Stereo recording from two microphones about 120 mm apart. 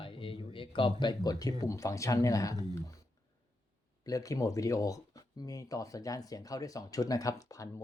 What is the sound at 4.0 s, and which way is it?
Speech, 30° left (ahead or behind).